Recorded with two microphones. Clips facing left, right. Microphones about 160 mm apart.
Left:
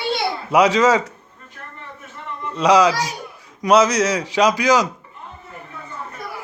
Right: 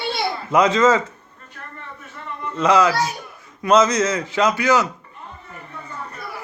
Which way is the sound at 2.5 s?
15° left (ahead or behind).